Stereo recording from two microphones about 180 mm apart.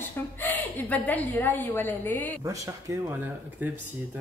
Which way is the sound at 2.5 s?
15° right (ahead or behind).